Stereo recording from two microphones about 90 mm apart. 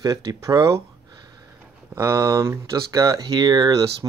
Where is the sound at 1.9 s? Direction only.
30° right (ahead or behind).